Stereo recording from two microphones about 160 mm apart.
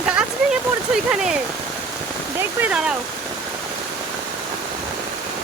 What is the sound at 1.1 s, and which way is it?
Speech, 5° right (ahead or behind).